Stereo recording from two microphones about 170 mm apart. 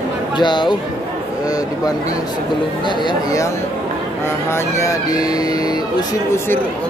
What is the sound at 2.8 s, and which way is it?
Speech, 25° left (ahead or behind).